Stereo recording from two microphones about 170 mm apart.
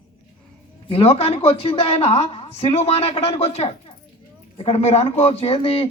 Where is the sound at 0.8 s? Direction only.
35° left (ahead or behind).